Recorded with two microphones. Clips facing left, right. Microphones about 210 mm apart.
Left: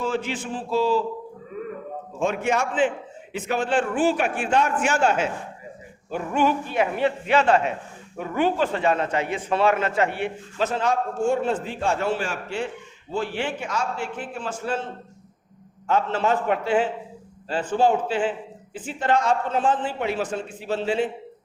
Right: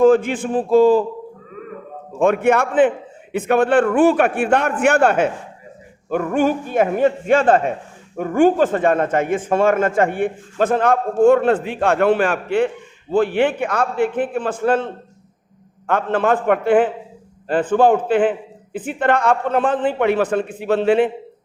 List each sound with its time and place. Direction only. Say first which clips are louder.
0.0 s a man's voice: right 13 dB; 55° right (ahead or behind)
2.1 s a man's voice: right 8 dB; 55° right (ahead or behind)
15.9 s a man's voice: right 4 dB; 55° right (ahead or behind)